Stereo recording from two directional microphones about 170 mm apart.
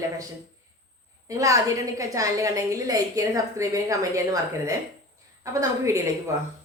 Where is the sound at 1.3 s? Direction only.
20° right (ahead or behind).